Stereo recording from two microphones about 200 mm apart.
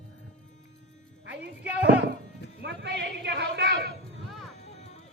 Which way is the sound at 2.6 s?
60° right (ahead or behind).